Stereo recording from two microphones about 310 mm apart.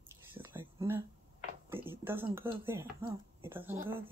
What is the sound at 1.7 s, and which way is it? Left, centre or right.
Speech, centre.